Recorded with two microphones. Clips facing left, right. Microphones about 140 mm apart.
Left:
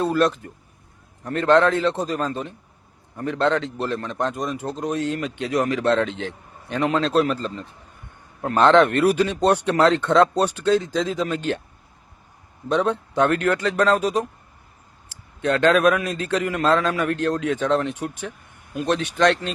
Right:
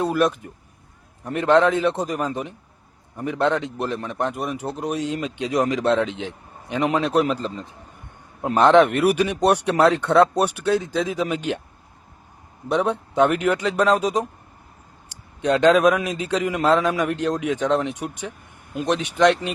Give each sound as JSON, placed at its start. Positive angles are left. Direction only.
{"t": 0.0, "sound": "a man's voice", "side_deg": -15}
{"t": 12.6, "sound": "a man's voice", "side_deg": -15}
{"t": 15.4, "sound": "a man's voice", "side_deg": -15}